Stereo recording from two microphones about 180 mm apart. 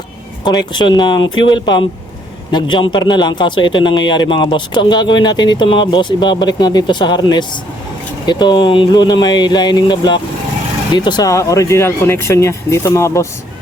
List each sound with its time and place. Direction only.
0.7 s a man's voice: 25° left (ahead or behind)